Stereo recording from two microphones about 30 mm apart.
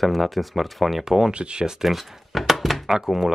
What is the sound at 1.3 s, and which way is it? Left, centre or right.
Speech, right.